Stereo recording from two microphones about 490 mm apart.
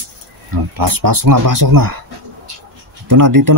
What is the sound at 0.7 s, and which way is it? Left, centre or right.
Speech, right.